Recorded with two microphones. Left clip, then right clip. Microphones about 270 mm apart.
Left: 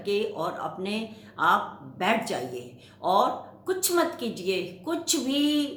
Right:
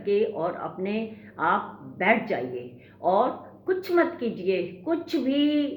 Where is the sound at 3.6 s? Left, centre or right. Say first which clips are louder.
Right 2 dB; centre.